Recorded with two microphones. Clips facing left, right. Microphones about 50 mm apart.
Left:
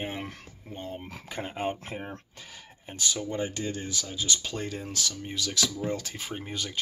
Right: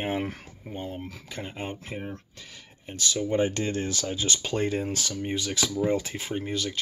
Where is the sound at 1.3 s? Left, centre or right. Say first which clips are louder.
Left 5 dB; centre.